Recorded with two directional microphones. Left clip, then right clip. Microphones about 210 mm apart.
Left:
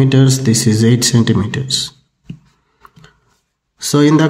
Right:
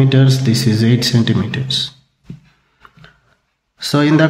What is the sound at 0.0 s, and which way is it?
A man's voice, 25° left (ahead or behind).